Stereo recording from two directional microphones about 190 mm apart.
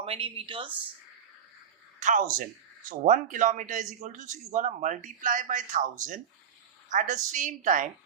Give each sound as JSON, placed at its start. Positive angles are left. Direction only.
{"t": 0.0, "sound": "speech", "side_deg": -30}
{"t": 2.0, "sound": "a woman's voice", "side_deg": -40}